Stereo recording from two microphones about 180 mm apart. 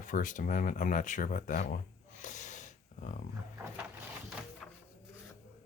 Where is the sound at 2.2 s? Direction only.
45° left (ahead or behind).